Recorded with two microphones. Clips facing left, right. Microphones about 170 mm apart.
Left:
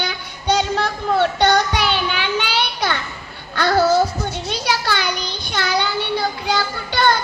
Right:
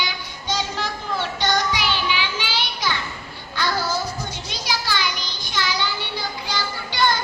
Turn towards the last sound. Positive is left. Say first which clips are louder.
# left 4 dB
turn(degrees=60)  # may be behind; listen again after turning